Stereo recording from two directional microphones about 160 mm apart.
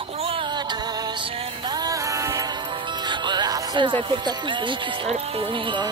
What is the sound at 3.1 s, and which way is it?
Speech, 25° right (ahead or behind).